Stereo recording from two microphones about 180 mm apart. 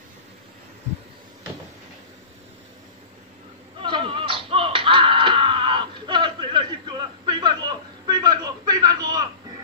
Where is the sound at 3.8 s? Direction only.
25° right (ahead or behind).